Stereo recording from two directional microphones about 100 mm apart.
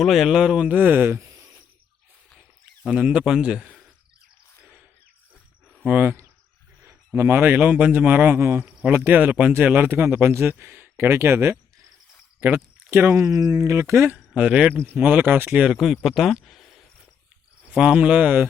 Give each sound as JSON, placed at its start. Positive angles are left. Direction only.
{"t": 0.0, "sound": "speech", "side_deg": 0}
{"t": 2.8, "sound": "speech", "side_deg": -10}
{"t": 5.8, "sound": "a man's voice", "side_deg": -20}
{"t": 14.3, "sound": "speech", "side_deg": -10}
{"t": 17.7, "sound": "speech", "side_deg": -10}